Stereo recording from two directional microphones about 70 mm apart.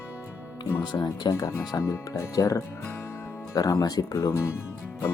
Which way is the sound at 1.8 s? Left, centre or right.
Left.